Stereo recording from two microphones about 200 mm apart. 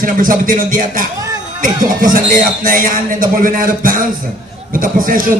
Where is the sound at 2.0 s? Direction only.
45° right (ahead or behind).